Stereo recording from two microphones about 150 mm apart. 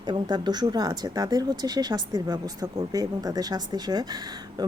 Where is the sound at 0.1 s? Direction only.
30° right (ahead or behind).